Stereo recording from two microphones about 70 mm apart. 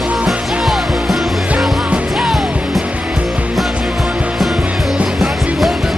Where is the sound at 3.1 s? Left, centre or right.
Centre.